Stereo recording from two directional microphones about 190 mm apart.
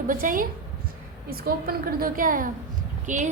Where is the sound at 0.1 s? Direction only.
45° right (ahead or behind).